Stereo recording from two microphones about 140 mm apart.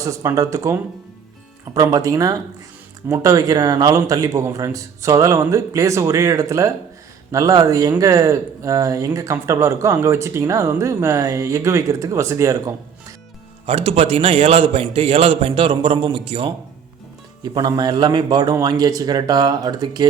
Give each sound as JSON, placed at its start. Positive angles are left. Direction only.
{"t": 0.0, "sound": "speech", "side_deg": -20}
{"t": 13.7, "sound": "a man's voice", "side_deg": -45}